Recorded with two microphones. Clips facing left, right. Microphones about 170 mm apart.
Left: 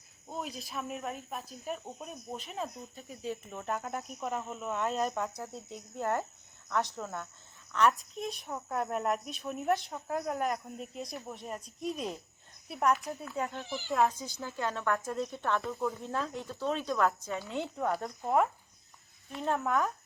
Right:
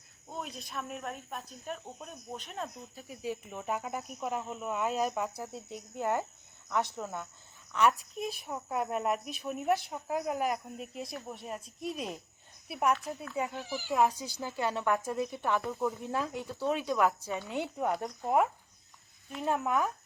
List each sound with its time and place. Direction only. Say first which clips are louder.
0.3 s speech: left 2 dB; centre (ahead or behind)
3.2 s speech: right 1 dB; 15° right (ahead or behind)
3.6 s speech: even; centre (ahead or behind)
17.5 s speech: right 1 dB; 15° right (ahead or behind)